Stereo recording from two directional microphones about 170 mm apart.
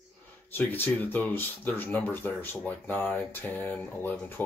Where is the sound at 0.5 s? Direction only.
10° left (ahead or behind).